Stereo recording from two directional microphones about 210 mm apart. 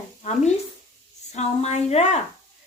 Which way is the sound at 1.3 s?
30° left (ahead or behind).